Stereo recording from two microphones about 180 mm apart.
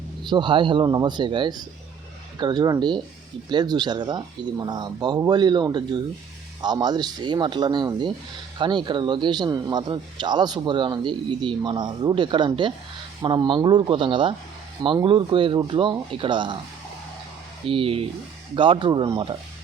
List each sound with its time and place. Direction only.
0.3 s a man's voice: 25° right (ahead or behind)
17.7 s a man's voice: 30° right (ahead or behind)